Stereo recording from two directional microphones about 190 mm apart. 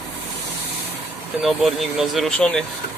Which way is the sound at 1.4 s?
Centre (ahead or behind).